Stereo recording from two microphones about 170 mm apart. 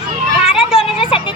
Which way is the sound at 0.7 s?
30° left (ahead or behind).